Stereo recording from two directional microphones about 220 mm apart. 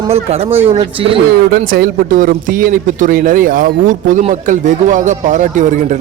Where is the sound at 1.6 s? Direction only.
40° right (ahead or behind).